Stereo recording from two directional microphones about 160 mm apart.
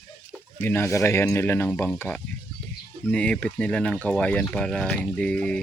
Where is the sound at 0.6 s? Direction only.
15° left (ahead or behind).